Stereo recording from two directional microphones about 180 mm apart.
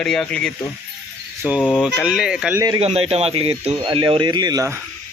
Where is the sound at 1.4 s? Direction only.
10° right (ahead or behind).